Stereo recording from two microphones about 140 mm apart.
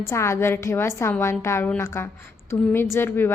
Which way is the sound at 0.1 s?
20° left (ahead or behind).